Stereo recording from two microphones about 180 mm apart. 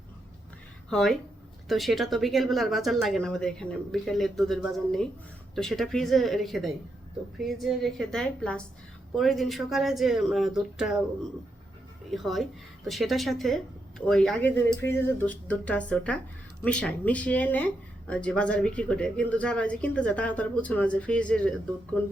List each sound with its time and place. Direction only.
0.9 s speech: centre (ahead or behind)
12.1 s speech: centre (ahead or behind)